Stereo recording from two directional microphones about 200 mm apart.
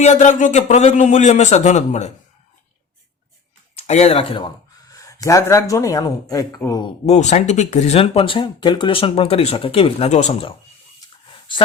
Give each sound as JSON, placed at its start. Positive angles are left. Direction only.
{"t": 0.0, "sound": "a man's voice", "side_deg": 35}
{"t": 3.8, "sound": "speech", "side_deg": 30}
{"t": 7.0, "sound": "speech", "side_deg": 35}
{"t": 11.3, "sound": "a sound", "side_deg": 25}